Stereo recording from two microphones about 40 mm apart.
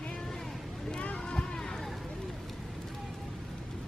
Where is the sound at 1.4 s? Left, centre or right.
Centre.